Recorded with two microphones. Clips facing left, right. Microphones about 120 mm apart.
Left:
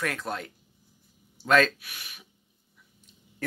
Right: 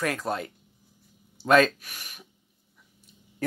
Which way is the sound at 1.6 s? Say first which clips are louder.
Right 2 dB; 45° right (ahead or behind).